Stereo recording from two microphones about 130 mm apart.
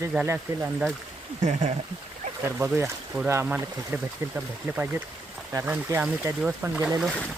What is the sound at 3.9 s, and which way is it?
Speech, 15° right (ahead or behind).